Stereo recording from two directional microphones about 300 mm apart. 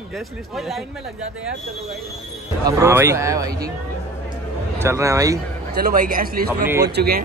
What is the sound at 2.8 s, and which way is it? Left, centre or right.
Speech, centre.